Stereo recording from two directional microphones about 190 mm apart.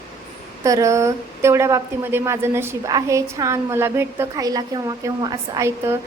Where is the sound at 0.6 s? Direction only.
15° right (ahead or behind).